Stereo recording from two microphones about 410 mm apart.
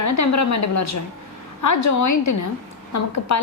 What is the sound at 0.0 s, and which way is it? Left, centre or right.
A woman's voice, left.